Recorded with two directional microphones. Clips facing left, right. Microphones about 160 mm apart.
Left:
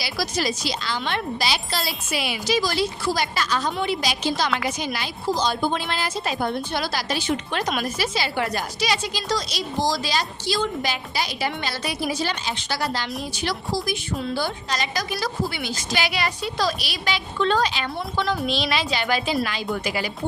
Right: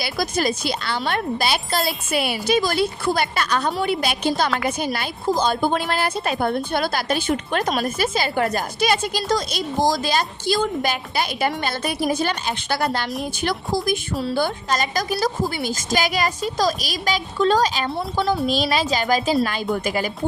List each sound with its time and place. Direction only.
0.0 s a woman's voice: 50° right (ahead or behind)